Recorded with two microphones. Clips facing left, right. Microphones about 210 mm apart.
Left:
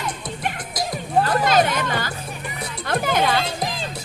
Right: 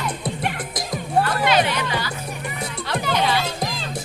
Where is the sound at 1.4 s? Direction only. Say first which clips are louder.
Left 1 dB; 45° left (ahead or behind).